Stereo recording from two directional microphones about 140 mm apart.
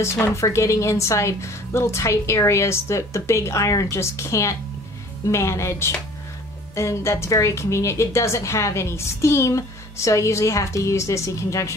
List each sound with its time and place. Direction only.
0.0 s a woman's voice: 20° left (ahead or behind)